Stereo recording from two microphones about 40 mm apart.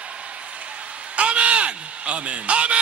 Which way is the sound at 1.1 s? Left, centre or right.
Right.